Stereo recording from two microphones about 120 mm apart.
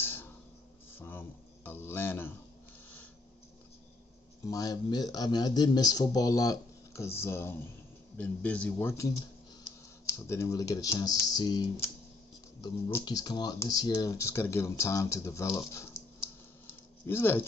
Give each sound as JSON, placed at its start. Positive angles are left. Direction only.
{"t": 0.0, "sound": "a sound", "side_deg": 20}
{"t": 0.9, "sound": "speech", "side_deg": 15}
{"t": 4.5, "sound": "a man's voice", "side_deg": 30}
{"t": 8.7, "sound": "speech", "side_deg": 25}
{"t": 13.0, "sound": "speech", "side_deg": 35}
{"t": 14.1, "sound": "speech", "side_deg": 25}
{"t": 17.0, "sound": "speech", "side_deg": 20}